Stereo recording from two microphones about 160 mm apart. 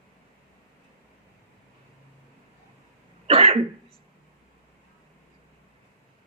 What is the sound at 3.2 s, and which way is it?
Speech, 35° right (ahead or behind).